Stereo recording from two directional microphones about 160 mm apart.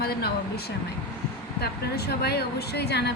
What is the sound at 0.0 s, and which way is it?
Speech, 75° left (ahead or behind).